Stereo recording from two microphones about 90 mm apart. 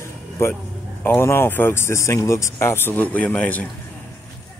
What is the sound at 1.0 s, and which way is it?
Speech, 25° left (ahead or behind).